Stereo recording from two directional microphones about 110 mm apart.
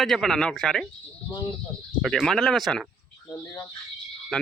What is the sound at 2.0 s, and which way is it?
Speech, centre (ahead or behind).